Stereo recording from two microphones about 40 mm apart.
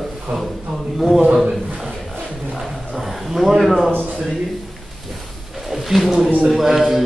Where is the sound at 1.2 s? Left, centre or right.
Centre.